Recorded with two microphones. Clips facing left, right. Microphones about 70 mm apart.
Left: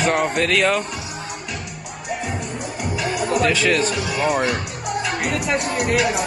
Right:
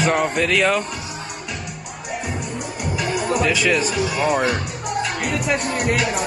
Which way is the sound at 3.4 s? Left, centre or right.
Centre.